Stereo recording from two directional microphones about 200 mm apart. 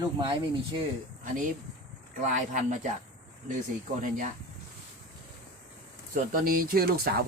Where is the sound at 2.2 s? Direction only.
40° right (ahead or behind).